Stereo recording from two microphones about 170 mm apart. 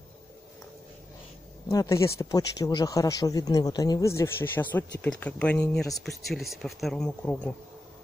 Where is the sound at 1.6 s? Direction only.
15° left (ahead or behind).